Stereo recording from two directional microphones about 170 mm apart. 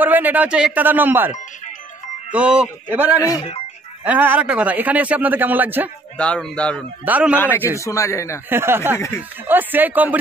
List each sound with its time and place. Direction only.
0.0 s a man's voice: 10° right (ahead or behind)
2.3 s a man's voice: 5° right (ahead or behind)
3.2 s speech: 20° left (ahead or behind)
4.0 s a man's voice: 10° right (ahead or behind)
6.1 s a man's voice: 5° left (ahead or behind)
7.1 s a man's voice: 10° right (ahead or behind)
7.3 s a man's voice: 10° left (ahead or behind)
8.5 s a man's voice: 15° right (ahead or behind)